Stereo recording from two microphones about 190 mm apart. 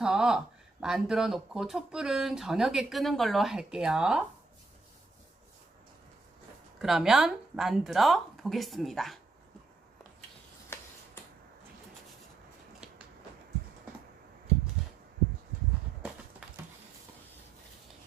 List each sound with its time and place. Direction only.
0.0 s speech: 5° right (ahead or behind)
6.7 s speech: centre (ahead or behind)
12.8 s a sound: 5° right (ahead or behind)